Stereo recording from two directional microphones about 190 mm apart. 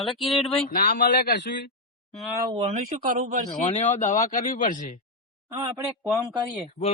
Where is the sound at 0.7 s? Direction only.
50° left (ahead or behind).